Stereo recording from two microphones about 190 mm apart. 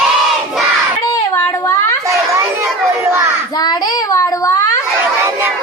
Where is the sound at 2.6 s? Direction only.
15° right (ahead or behind).